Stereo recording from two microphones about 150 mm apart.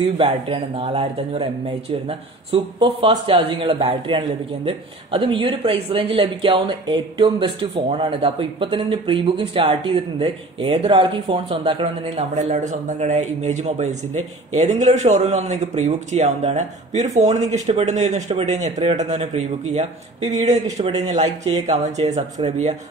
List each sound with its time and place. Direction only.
0.0 s speech: 35° right (ahead or behind)